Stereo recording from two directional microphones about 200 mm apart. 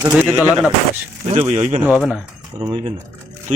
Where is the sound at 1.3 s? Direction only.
35° right (ahead or behind).